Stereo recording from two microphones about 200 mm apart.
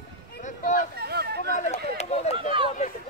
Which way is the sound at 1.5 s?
35° left (ahead or behind).